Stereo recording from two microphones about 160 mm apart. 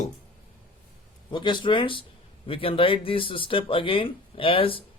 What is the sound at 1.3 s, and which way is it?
Speech, 30° left (ahead or behind).